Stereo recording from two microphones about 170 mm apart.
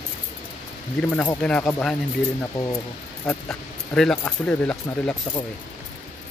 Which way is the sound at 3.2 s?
5° left (ahead or behind).